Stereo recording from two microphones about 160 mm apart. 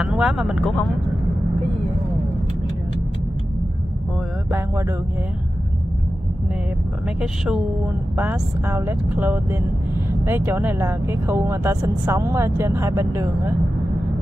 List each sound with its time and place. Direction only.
0.0 s speech: 5° right (ahead or behind)
4.5 s speech: 15° right (ahead or behind)
7.2 s speech: 5° right (ahead or behind)